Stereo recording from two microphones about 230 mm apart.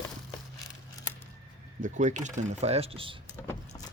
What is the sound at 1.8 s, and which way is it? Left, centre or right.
Speech, right.